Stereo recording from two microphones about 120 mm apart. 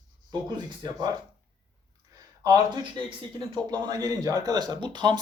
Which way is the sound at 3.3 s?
35° right (ahead or behind).